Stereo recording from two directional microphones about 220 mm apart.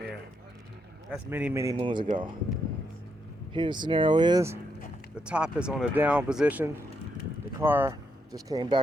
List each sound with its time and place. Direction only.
1.1 s speech: 5° right (ahead or behind)
3.5 s speech: 20° right (ahead or behind)
5.1 s speech: 5° right (ahead or behind)